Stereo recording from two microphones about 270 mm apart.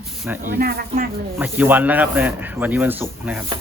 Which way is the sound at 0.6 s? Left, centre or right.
Right.